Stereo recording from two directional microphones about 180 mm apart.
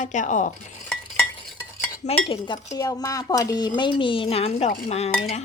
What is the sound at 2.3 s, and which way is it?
Speech, 25° left (ahead or behind).